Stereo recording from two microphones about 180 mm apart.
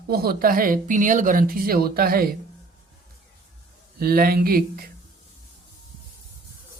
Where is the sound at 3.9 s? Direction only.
55° right (ahead or behind).